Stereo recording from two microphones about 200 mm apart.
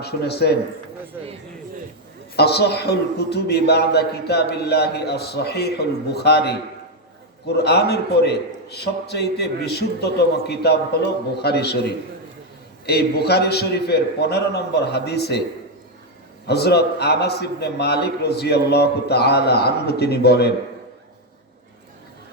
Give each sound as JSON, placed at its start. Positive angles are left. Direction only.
{"t": 0.0, "sound": "a man's voice", "side_deg": 55}
{"t": 2.3, "sound": "a man's voice", "side_deg": 55}
{"t": 16.5, "sound": "a man's voice", "side_deg": 55}